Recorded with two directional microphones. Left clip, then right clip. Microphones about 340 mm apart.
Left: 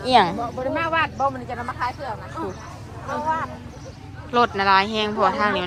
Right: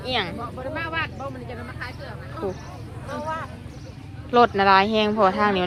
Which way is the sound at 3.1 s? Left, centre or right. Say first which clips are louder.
Left 6 dB; left.